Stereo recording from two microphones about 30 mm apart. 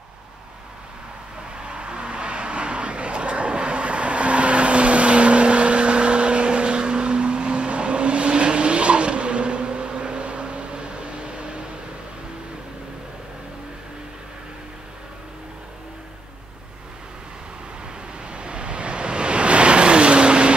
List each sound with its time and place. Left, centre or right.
1.6 s vehicle: right
18.3 s waves: right